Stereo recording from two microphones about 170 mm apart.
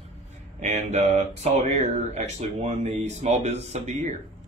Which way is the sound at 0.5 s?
45° right (ahead or behind).